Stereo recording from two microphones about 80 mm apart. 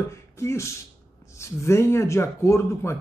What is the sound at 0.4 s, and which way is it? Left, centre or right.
Speech, left.